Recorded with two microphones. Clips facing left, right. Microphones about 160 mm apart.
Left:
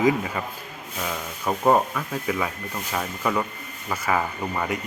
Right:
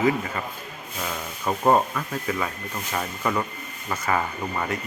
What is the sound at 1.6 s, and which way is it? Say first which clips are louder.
Speech: even; 5° left (ahead or behind).